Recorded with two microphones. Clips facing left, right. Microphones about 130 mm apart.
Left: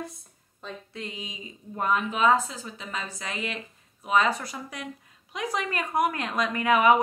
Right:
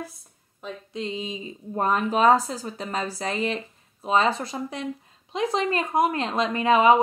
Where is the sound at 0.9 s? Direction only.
25° right (ahead or behind).